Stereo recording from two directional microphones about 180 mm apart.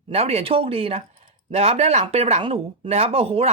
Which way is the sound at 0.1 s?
35° right (ahead or behind).